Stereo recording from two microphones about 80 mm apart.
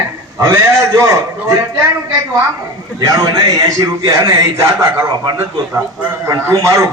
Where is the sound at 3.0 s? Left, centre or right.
Right.